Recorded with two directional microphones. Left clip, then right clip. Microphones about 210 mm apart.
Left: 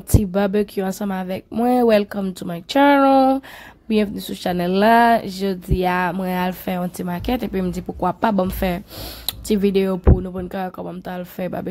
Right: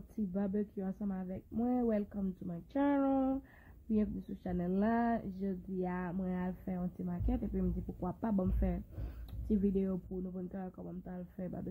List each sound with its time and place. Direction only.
0.3 s speech: 35° left (ahead or behind)